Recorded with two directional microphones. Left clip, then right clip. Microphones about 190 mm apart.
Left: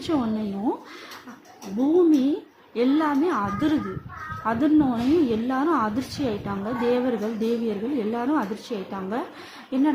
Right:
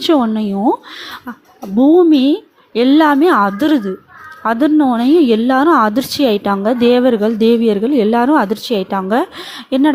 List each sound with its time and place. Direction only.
0.0 s a woman's voice: 40° right (ahead or behind)
2.0 s a woman's voice: 40° right (ahead or behind)